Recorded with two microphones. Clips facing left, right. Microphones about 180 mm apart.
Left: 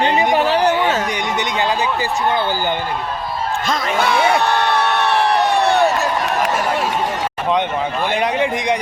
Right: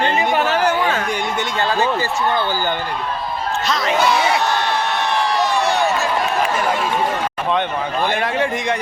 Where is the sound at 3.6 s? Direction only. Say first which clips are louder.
Right 2 dB; 50° left (ahead or behind).